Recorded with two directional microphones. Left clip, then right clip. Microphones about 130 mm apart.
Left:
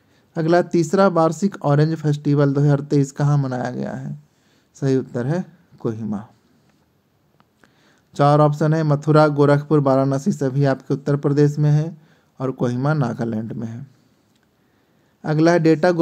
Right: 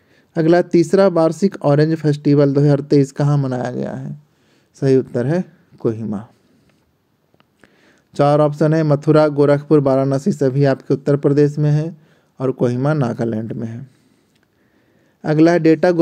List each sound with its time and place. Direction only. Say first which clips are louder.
0.3 s speech: right 4 dB; 30° right (ahead or behind)
7.6 s speech: right 5 dB; 25° right (ahead or behind)
15.2 s speech: right 3 dB; 30° right (ahead or behind)